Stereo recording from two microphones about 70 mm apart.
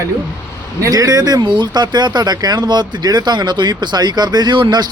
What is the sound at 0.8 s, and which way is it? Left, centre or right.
Speech, right.